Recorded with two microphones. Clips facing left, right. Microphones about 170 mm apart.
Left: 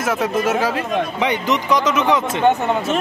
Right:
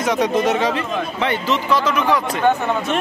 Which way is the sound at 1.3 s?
15° left (ahead or behind).